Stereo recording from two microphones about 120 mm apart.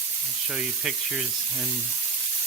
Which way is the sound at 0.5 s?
5° right (ahead or behind).